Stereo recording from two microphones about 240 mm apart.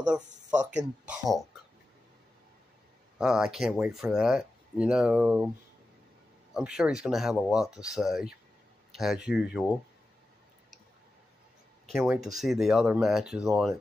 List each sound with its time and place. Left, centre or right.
0.3 s speech: right
1.0 s speech: centre
3.2 s speech: centre
6.5 s speech: centre
11.8 s speech: centre